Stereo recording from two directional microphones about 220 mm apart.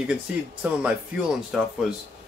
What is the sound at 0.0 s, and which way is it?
Speech, 5° right (ahead or behind).